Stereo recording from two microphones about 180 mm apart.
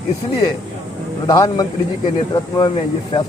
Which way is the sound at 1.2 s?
15° left (ahead or behind).